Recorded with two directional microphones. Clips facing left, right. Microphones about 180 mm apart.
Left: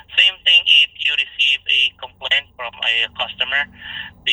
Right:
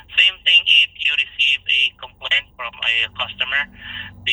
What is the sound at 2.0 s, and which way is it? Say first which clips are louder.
Speech: left 5 dB; 35° left (ahead or behind).